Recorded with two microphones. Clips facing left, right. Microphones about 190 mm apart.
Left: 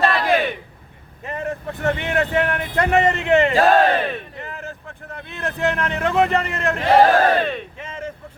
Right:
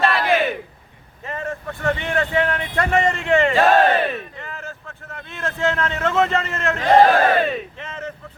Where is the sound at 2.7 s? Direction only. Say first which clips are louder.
Left 2 dB; 20° left (ahead or behind).